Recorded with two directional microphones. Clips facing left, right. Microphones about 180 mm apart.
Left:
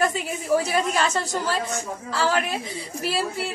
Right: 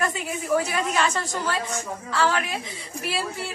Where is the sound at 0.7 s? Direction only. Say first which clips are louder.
Left 2 dB; 35° left (ahead or behind).